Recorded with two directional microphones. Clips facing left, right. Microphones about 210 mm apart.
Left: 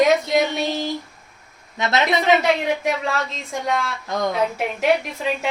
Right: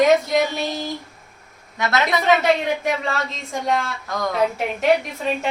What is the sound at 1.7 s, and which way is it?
Speech, 20° left (ahead or behind).